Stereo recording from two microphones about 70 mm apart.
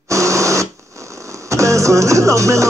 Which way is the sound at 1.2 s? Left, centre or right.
Right.